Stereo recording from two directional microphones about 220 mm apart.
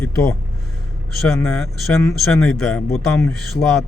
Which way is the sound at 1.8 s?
10° left (ahead or behind).